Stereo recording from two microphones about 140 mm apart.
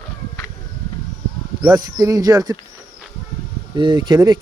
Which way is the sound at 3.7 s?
30° right (ahead or behind).